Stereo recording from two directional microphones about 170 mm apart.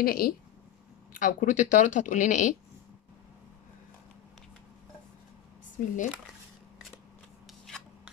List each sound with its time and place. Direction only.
0.0 s speech: 60° left (ahead or behind)
1.1 s speech: 50° left (ahead or behind)
5.8 s speech: 50° left (ahead or behind)
7.6 s rub: centre (ahead or behind)